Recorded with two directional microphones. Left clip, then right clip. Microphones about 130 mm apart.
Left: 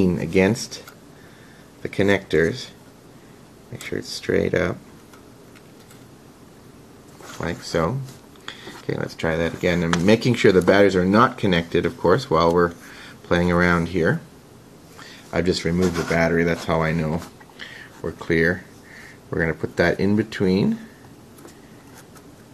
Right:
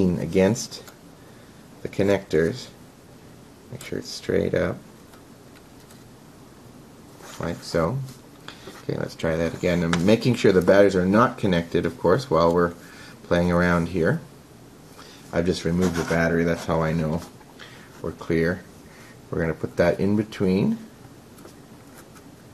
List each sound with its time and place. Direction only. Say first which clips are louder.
0.0 s speech: left 2 dB; 25° left (ahead or behind)
1.8 s speech: left 2 dB; 20° left (ahead or behind)
4.0 s speech: left 2 dB; 20° left (ahead or behind)
7.3 s speech: left 1 dB; 20° left (ahead or behind)
15.3 s speech: left 2 dB; 20° left (ahead or behind)
15.8 s speech: left 2 dB; centre (ahead or behind)
16.1 s speech: left 3 dB; 20° left (ahead or behind)